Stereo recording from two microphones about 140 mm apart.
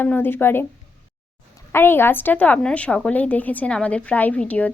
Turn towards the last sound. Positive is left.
turn(degrees=10)  # may be behind; listen again after turning